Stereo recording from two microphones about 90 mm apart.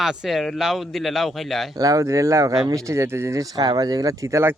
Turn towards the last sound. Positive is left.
turn(degrees=-30)  # may be behind; listen again after turning